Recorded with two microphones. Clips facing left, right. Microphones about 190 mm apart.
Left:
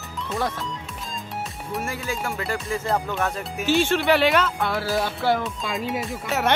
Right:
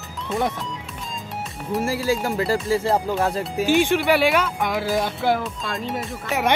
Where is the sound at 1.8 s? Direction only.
30° right (ahead or behind).